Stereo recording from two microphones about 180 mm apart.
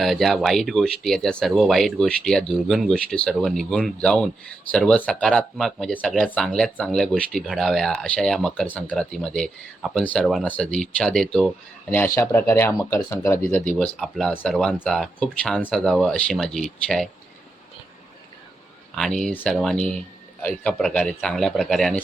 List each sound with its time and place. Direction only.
0.0 s speech: centre (ahead or behind)
18.9 s speech: 5° left (ahead or behind)